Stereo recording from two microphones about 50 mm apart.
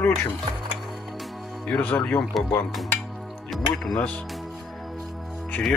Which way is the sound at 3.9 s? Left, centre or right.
Centre.